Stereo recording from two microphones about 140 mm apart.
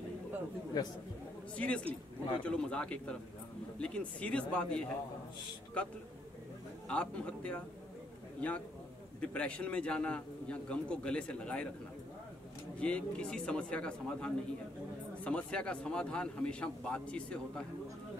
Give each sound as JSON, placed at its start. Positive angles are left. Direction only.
{"t": 0.8, "sound": "speech", "side_deg": 30}
{"t": 1.6, "sound": "a man's voice", "side_deg": 10}
{"t": 12.7, "sound": "a man's voice", "side_deg": 10}